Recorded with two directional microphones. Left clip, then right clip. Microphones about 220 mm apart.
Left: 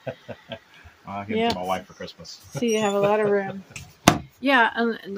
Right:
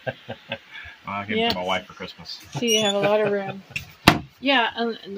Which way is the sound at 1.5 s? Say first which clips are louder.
Right 2 dB; 10° right (ahead or behind).